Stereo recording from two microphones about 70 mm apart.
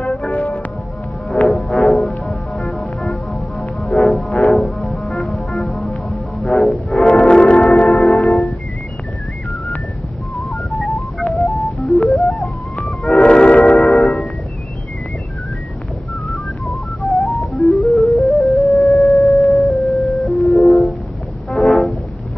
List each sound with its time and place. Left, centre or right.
0.0 s music: centre
0.4 s music: centre
1.3 s music: centre
2.0 s music: centre
8.1 s music: centre
10.3 s music: centre
13.1 s train: centre
16.3 s music: centre